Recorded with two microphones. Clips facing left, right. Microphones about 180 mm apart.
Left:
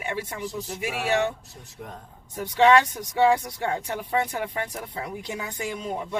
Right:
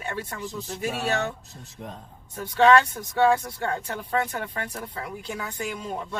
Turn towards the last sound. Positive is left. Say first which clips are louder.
# left 1 dB
turn(degrees=20)  # may be behind; listen again after turning